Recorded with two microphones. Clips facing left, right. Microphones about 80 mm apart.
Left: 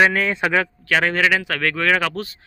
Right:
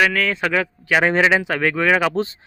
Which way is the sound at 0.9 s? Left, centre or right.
Centre.